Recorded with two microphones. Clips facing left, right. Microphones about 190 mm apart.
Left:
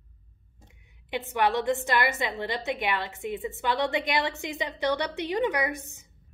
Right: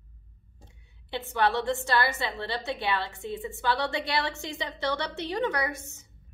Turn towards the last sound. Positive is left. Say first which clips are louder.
# left 2 dB
turn(degrees=15)  # may be behind; listen again after turning